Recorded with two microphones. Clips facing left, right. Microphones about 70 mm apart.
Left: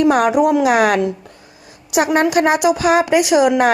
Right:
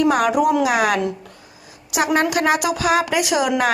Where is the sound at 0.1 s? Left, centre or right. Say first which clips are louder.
Left 3 dB; left.